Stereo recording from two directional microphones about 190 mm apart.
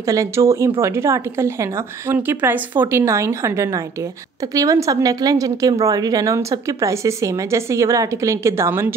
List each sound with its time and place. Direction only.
0.0 s a woman's voice: 15° right (ahead or behind)